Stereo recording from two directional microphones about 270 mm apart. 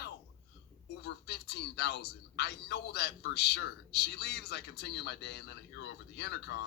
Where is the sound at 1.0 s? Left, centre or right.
Left.